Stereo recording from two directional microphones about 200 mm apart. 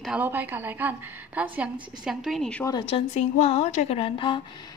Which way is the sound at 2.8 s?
30° left (ahead or behind).